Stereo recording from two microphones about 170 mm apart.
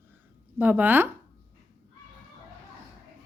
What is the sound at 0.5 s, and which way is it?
Speech, 10° right (ahead or behind).